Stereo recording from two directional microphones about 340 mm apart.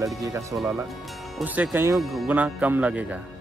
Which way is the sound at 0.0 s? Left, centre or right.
Centre.